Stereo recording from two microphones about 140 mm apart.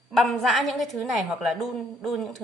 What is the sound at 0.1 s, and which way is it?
A woman's voice, centre (ahead or behind).